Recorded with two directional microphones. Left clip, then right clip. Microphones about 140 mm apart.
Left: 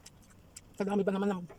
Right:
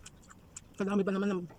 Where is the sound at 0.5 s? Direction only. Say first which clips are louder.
Left 1 dB; 20° right (ahead or behind).